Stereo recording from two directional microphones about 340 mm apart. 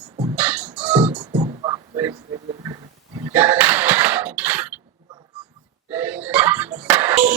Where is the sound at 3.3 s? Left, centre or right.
Centre.